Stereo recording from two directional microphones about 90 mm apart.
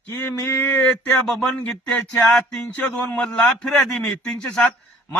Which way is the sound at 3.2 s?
5° left (ahead or behind).